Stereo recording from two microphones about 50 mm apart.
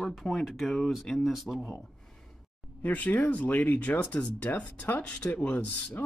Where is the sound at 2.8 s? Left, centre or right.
Left.